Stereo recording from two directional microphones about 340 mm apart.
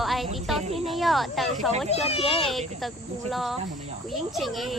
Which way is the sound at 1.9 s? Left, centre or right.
Centre.